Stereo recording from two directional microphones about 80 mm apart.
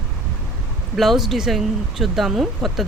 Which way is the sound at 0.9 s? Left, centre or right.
Centre.